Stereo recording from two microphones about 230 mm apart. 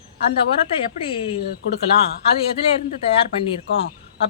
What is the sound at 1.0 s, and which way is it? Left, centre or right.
Speech, left.